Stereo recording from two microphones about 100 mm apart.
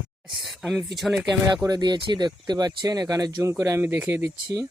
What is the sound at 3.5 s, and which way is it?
Speech, 25° right (ahead or behind).